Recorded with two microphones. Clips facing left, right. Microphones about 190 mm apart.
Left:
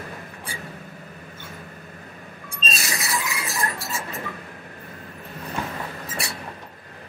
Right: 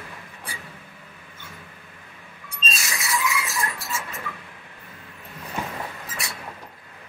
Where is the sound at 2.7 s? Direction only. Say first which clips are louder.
Even; 35° left (ahead or behind).